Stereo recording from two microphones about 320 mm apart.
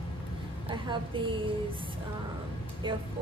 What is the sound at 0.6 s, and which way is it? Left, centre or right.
Speech, centre.